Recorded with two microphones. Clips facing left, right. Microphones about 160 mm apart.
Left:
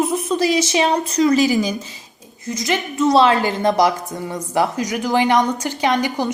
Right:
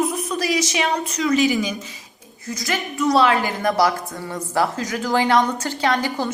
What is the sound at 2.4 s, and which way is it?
A woman's voice, 20° left (ahead or behind).